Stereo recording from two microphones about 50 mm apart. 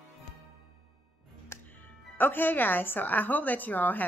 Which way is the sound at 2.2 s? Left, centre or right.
Left.